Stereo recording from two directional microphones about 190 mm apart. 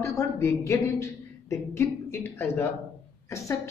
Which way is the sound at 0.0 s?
15° left (ahead or behind).